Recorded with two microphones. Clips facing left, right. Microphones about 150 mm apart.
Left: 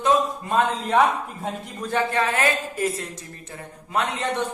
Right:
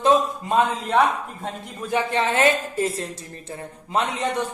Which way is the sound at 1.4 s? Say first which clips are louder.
Left 2 dB; centre (ahead or behind).